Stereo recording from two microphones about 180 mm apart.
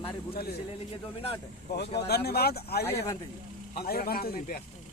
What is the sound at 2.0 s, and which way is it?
Speech, 65° left (ahead or behind).